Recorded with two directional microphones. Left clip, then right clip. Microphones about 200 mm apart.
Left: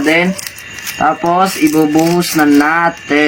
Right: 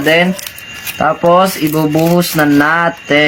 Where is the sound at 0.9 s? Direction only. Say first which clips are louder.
Right 2 dB; 50° right (ahead or behind).